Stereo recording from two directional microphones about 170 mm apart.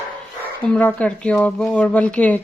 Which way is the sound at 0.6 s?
5° left (ahead or behind).